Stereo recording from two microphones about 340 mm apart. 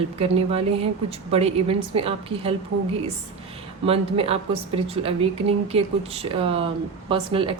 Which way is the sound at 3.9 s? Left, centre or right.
Centre.